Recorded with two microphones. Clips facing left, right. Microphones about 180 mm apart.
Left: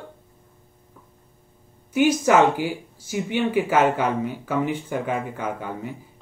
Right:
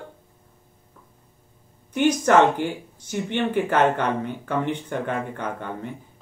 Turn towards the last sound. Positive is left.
turn(degrees=5)  # may be behind; listen again after turning